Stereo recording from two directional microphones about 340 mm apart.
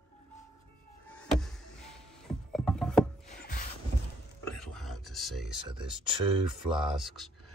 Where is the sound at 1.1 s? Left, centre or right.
Centre.